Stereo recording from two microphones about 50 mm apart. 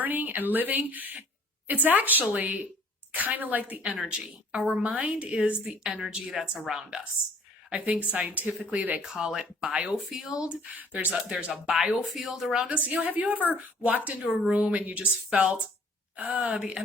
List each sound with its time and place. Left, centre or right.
0.0 s speech: right
3.9 s speech: centre
4.5 s a woman's voice: right; by 7.0 s centre
8.0 s a woman's voice: right
9.2 s a woman's voice: centre
10.8 s a woman's voice: right
11.7 s speech: centre
13.1 s speech: right
14.3 s speech: centre
14.5 s a woman's voice: right